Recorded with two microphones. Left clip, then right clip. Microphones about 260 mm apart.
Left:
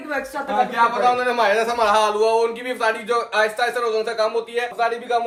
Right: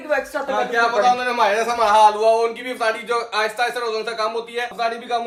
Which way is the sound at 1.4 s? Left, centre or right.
Centre.